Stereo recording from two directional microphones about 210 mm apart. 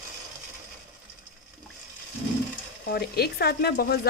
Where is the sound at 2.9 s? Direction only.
50° left (ahead or behind).